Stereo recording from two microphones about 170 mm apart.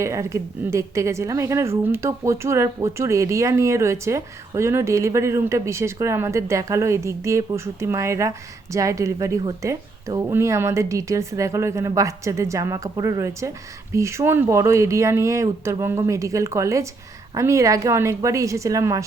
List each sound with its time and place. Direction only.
0.0 s a woman's voice: 15° right (ahead or behind)